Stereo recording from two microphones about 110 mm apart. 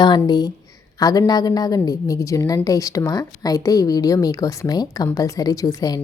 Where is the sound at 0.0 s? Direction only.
40° left (ahead or behind).